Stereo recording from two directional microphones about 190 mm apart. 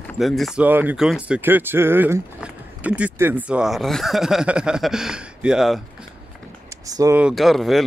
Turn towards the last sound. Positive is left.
turn(degrees=0)  # may be behind; listen again after turning